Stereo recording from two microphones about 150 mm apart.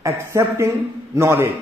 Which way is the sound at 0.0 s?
20° right (ahead or behind).